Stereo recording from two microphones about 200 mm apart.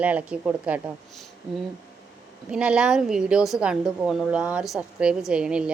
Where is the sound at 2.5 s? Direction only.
5° right (ahead or behind).